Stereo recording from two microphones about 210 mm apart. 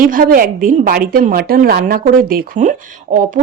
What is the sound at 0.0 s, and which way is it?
A woman's voice, 40° right (ahead or behind).